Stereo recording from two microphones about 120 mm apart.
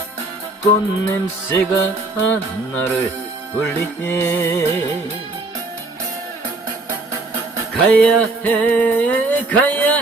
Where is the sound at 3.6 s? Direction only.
15° left (ahead or behind).